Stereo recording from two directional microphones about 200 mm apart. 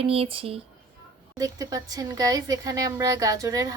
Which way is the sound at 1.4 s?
15° right (ahead or behind).